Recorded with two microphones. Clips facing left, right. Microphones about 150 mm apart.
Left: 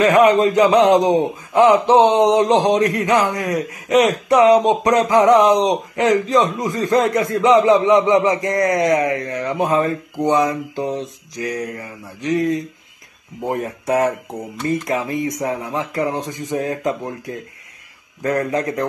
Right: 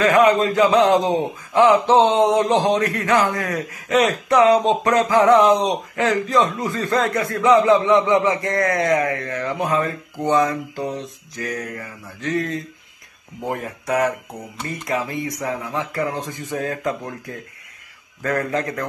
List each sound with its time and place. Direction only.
0.0 s speech: 25° left (ahead or behind)